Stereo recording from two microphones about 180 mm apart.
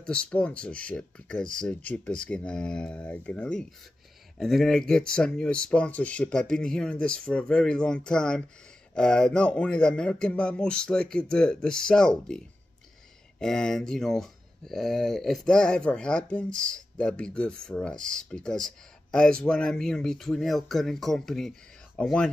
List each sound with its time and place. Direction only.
0.0 s speech: 5° left (ahead or behind)
13.4 s speech: 5° left (ahead or behind)